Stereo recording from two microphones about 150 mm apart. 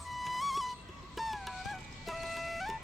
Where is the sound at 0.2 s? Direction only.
Centre (ahead or behind).